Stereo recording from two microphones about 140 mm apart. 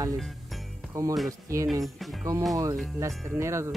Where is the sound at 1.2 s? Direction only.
20° right (ahead or behind).